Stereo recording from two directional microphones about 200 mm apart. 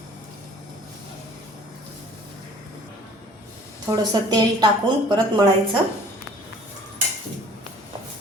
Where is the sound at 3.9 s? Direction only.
20° right (ahead or behind).